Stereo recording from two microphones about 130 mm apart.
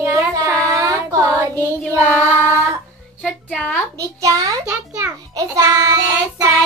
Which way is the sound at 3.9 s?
25° right (ahead or behind).